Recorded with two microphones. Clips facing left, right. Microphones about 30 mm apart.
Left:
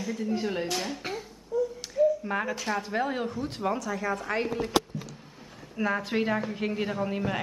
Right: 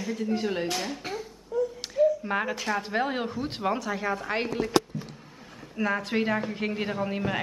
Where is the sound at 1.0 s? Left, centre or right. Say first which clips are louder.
Right 1 dB; centre.